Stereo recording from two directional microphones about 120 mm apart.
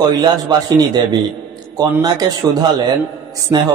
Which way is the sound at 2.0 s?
35° right (ahead or behind).